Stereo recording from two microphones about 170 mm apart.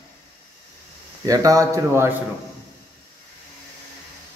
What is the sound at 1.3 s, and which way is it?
Speech, 20° right (ahead or behind).